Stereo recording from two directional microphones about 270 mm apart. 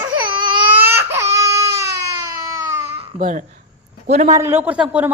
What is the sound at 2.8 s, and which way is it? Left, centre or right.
Babbling, right.